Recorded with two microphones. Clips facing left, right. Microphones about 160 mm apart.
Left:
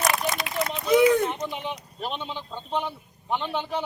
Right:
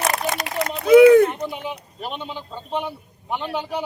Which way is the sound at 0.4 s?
60° right (ahead or behind).